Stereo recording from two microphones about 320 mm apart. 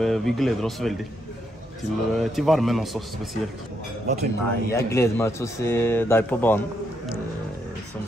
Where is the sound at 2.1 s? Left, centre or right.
Centre.